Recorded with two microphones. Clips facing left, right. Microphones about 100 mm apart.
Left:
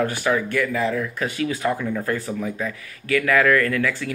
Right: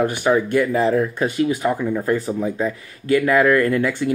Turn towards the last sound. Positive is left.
turn(degrees=-25)  # may be behind; listen again after turning